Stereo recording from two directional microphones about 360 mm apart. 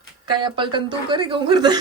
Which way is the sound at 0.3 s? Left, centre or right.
Centre.